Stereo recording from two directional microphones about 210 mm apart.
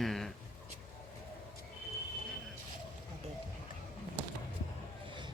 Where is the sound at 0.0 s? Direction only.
Centre (ahead or behind).